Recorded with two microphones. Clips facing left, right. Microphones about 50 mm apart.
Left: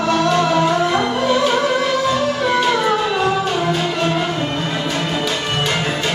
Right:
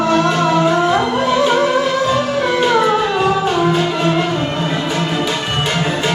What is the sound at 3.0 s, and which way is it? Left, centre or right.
Music, centre.